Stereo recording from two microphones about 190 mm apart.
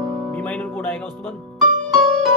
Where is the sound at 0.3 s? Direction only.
10° left (ahead or behind).